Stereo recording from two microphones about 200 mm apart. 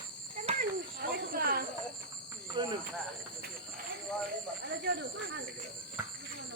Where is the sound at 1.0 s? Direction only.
50° right (ahead or behind).